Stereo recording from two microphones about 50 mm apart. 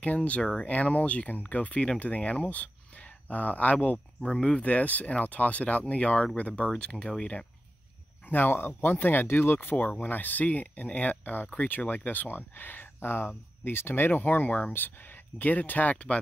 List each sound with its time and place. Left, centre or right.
0.0 s speech: left
4.2 s speech: left
6.7 s speech: centre
8.3 s speech: left